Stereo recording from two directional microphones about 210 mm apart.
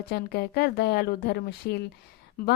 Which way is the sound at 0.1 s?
50° left (ahead or behind).